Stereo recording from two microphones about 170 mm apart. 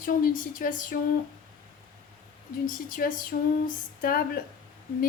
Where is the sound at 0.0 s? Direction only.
55° left (ahead or behind).